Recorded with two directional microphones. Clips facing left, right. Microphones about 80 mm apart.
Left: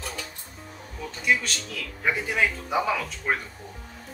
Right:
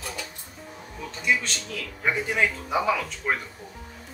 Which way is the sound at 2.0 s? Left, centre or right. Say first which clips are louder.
Even; centre.